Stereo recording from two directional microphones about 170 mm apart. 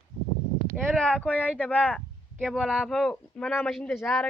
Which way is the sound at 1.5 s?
10° left (ahead or behind).